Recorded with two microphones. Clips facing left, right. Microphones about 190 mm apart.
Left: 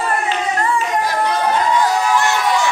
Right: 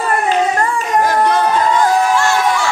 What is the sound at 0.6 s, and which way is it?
Music, 45° right (ahead or behind).